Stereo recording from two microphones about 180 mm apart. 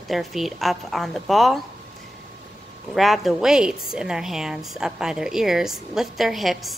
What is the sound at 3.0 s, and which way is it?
A woman's voice, centre (ahead or behind).